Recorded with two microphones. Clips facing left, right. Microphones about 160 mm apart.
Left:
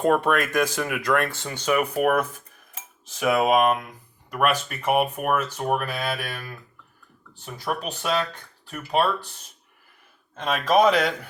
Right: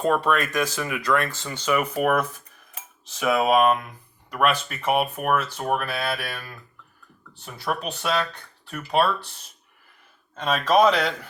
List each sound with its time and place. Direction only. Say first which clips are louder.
0.0 s speech: left 1 dB; 55° left (ahead or behind)
1.8 s speech: left 1 dB; 10° left (ahead or behind)
3.2 s speech: even; 10° left (ahead or behind)
7.4 s speech: even; 10° left (ahead or behind)
10.4 s speech: even; 10° left (ahead or behind)